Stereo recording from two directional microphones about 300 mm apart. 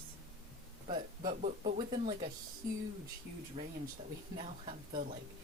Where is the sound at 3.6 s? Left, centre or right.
Centre.